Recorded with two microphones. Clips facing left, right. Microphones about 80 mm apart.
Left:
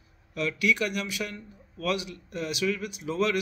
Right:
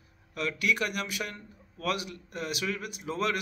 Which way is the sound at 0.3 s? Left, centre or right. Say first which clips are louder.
Left 3 dB; right.